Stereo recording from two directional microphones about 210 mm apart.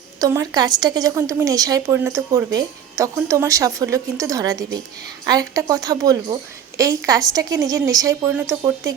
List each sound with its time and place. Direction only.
0.2 s a woman's voice: 15° right (ahead or behind)